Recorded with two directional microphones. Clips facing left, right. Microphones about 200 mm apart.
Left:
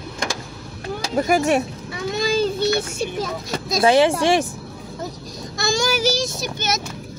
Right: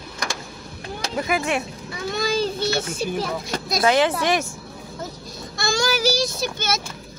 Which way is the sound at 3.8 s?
25° left (ahead or behind).